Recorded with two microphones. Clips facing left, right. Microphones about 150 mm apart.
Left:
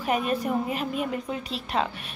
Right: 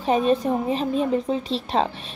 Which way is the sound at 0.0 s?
25° right (ahead or behind).